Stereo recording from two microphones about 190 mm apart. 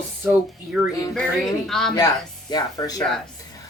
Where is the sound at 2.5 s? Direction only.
20° left (ahead or behind).